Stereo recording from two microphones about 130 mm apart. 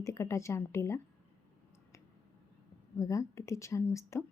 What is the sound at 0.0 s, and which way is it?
A woman's voice, 25° left (ahead or behind).